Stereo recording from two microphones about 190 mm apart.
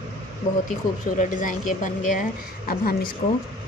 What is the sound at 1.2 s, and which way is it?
A woman's voice, 45° left (ahead or behind).